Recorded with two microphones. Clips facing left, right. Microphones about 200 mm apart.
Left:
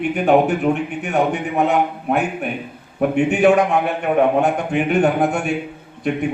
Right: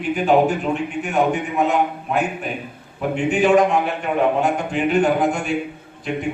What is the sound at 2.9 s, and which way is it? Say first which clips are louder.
Speech: left 3 dB; 60° left (ahead or behind).